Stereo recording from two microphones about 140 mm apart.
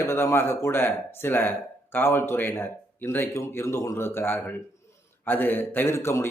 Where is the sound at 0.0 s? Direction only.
15° left (ahead or behind).